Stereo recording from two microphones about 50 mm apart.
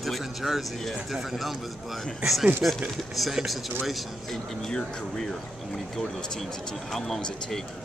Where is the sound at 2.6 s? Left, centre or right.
Right.